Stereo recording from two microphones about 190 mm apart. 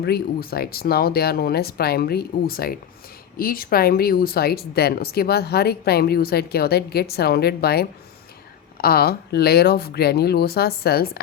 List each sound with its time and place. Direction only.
0.0 s speech: 55° left (ahead or behind)